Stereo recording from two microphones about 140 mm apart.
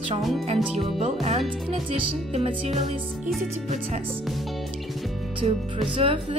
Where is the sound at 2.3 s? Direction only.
45° right (ahead or behind).